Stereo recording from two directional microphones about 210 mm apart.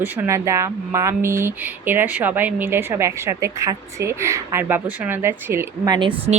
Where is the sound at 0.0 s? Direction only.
10° right (ahead or behind).